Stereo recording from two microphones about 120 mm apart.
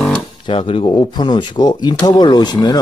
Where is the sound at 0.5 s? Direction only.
50° left (ahead or behind).